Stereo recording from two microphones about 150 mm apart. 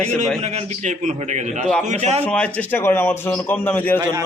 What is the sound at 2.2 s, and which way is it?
A man's voice, 10° left (ahead or behind).